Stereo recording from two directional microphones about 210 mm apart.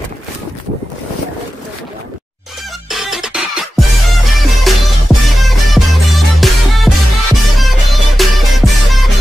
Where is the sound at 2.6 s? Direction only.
Centre (ahead or behind).